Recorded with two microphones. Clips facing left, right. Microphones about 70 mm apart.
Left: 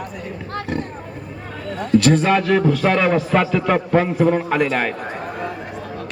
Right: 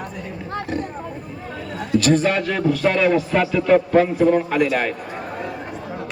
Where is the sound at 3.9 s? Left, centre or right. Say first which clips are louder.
Right 1 dB; centre.